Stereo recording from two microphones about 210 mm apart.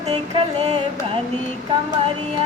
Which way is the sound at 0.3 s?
30° right (ahead or behind).